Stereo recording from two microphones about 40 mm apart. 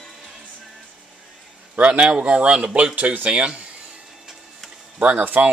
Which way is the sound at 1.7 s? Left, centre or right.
Right.